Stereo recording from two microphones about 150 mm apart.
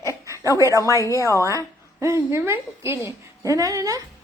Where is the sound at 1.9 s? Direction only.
15° right (ahead or behind).